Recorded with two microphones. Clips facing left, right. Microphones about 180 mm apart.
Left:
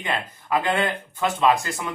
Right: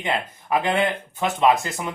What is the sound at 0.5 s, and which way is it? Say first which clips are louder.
Speech: right 1 dB; 25° right (ahead or behind).